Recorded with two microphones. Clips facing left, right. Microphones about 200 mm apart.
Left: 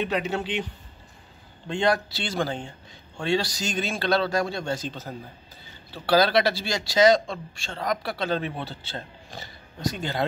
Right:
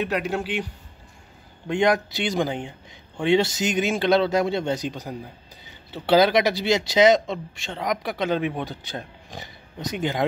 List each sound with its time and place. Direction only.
0.0 s speech: 10° right (ahead or behind)
1.7 s speech: 15° right (ahead or behind)